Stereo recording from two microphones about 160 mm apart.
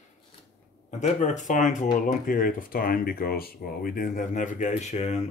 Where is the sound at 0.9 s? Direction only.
50° left (ahead or behind).